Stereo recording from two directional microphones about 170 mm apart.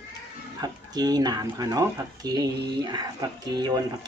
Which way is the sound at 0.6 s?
25° right (ahead or behind).